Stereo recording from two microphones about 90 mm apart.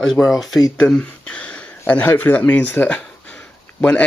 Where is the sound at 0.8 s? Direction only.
15° left (ahead or behind).